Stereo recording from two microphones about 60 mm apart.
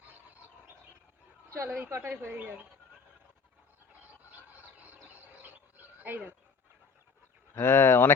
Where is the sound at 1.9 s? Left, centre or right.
Right.